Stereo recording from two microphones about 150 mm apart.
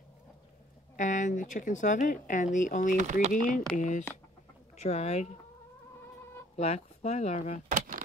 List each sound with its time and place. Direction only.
0.9 s speech: 55° left (ahead or behind)
3.0 s speech: 50° right (ahead or behind)
3.7 s speech: 55° left (ahead or behind)
4.7 s speech: 45° left (ahead or behind)
6.5 s speech: 45° left (ahead or behind)
7.6 s a sound: 65° right (ahead or behind)